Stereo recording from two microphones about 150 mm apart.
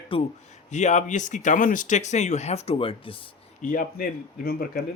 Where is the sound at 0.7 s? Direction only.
50° left (ahead or behind); by 3.2 s 35° left (ahead or behind).